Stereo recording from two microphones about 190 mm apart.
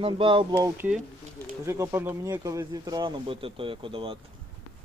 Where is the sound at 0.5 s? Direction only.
10° right (ahead or behind); by 4.1 s 25° right (ahead or behind).